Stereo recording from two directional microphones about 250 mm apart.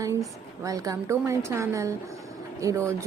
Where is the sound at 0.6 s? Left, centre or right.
Centre.